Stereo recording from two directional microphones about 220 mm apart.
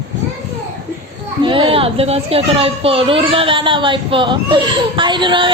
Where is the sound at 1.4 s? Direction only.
20° right (ahead or behind).